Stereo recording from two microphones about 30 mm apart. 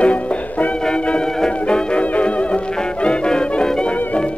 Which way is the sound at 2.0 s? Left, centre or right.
Left.